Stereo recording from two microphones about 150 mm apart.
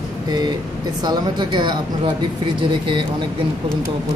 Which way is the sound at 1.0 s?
30° right (ahead or behind).